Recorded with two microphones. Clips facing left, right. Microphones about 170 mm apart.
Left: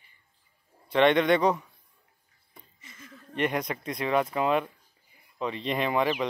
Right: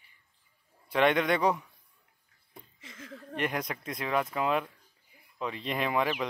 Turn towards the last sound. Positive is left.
turn(degrees=0)  # may be behind; listen again after turning